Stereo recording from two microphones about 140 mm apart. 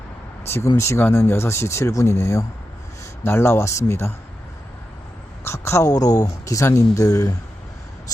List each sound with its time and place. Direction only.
0.4 s speech: 20° left (ahead or behind)
5.4 s a woman's voice: 20° left (ahead or behind)